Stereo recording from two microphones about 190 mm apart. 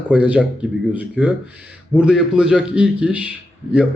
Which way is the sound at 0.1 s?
5° right (ahead or behind).